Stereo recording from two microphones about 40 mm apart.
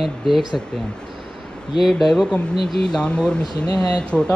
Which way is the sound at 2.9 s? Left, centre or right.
Left.